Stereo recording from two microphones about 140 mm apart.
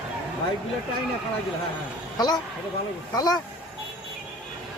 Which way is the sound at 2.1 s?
30° left (ahead or behind).